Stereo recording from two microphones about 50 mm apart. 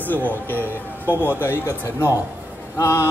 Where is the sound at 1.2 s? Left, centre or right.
Left.